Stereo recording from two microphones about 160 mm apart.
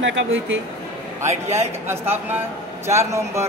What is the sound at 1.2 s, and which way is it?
Speech, 40° right (ahead or behind).